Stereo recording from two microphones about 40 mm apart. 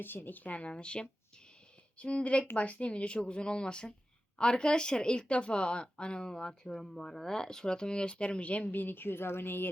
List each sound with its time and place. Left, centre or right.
0.0 s speech: left
8.7 s a woman's voice: left